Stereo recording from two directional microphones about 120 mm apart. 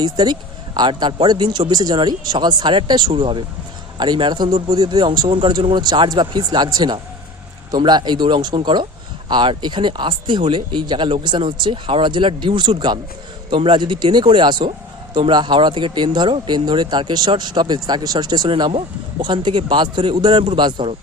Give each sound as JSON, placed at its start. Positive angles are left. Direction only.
{"t": 0.0, "sound": "speech", "side_deg": -35}